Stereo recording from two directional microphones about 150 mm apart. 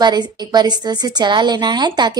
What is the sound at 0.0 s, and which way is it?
A woman's voice, 30° right (ahead or behind).